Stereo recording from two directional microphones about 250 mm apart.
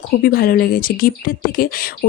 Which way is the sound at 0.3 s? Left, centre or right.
Left.